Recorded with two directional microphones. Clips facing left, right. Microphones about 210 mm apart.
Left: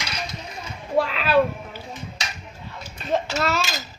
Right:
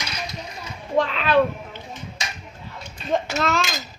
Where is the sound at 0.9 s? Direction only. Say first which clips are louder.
Even; 5° left (ahead or behind).